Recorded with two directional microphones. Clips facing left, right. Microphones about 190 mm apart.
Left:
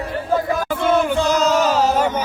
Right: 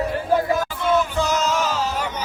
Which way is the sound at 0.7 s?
55° left (ahead or behind).